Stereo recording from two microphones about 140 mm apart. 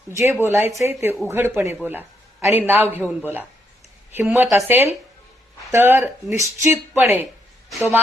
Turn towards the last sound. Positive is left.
turn(degrees=-15)  # may be behind; listen again after turning